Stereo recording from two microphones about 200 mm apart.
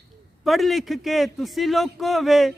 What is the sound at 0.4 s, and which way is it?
A man's voice, centre (ahead or behind).